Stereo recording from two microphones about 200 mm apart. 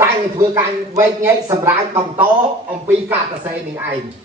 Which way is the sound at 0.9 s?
15° right (ahead or behind).